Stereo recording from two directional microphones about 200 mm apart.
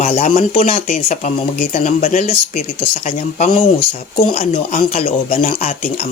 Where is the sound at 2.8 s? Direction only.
35° left (ahead or behind).